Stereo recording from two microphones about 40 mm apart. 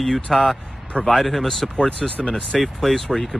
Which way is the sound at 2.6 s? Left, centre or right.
Centre.